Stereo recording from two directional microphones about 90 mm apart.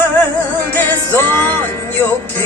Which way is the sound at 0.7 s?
20° left (ahead or behind).